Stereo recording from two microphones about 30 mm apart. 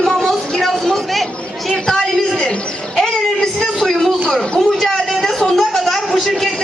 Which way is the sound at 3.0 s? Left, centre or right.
Centre.